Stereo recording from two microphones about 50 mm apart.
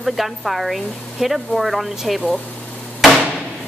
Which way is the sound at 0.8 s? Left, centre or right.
Centre.